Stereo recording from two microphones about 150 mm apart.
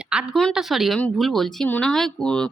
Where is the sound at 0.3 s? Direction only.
Centre (ahead or behind).